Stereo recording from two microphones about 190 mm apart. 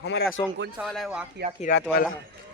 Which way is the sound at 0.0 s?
65° left (ahead or behind).